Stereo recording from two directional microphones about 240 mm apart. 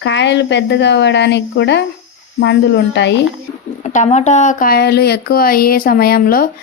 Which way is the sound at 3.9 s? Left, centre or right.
Left.